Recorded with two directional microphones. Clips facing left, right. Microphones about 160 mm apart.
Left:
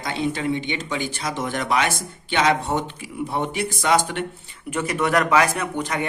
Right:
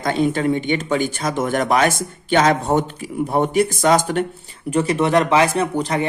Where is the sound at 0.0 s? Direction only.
50° right (ahead or behind).